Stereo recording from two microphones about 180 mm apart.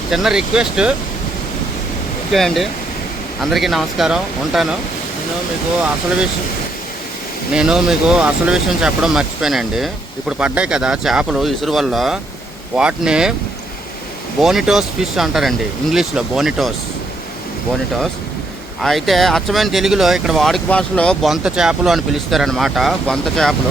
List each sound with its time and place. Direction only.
0.1 s speech: 5° right (ahead or behind)
2.3 s speech: centre (ahead or behind)
7.5 s speech: 5° right (ahead or behind)
14.4 s speech: centre (ahead or behind)
18.8 s speech: centre (ahead or behind)